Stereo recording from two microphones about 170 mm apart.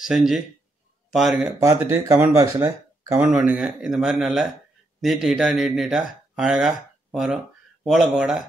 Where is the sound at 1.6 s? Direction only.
20° right (ahead or behind).